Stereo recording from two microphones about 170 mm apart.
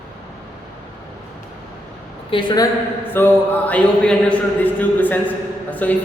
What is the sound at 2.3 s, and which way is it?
Speech, 25° left (ahead or behind).